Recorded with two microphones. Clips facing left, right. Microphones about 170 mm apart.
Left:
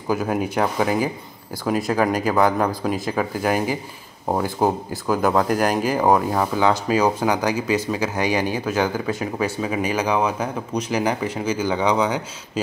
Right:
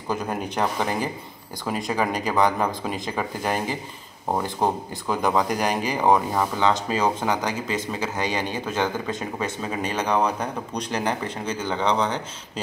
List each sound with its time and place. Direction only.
0.1 s speech: 5° left (ahead or behind)